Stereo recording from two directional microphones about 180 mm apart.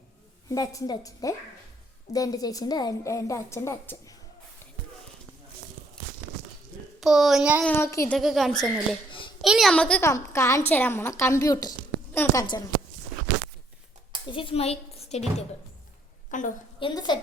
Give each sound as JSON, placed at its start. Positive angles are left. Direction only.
{"t": 0.4, "sound": "a woman's voice", "side_deg": 20}
{"t": 7.0, "sound": "speech", "side_deg": 0}
{"t": 7.6, "sound": "a woman's voice", "side_deg": 10}
{"t": 8.1, "sound": "a woman's voice", "side_deg": 0}
{"t": 14.3, "sound": "a woman's voice", "side_deg": 30}
{"t": 16.3, "sound": "a woman's voice", "side_deg": 45}
{"t": 16.8, "sound": "a woman's voice", "side_deg": 25}